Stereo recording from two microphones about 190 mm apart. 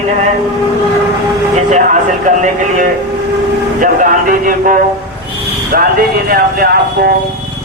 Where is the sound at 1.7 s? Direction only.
40° right (ahead or behind).